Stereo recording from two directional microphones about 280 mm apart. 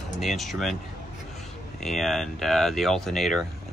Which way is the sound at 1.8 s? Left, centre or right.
Centre.